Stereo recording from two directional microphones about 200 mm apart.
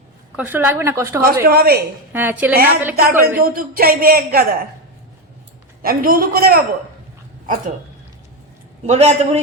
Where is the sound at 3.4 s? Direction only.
45° right (ahead or behind).